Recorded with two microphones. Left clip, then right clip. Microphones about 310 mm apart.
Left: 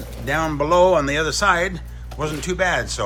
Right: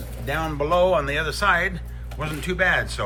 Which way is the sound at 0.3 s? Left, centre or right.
Left.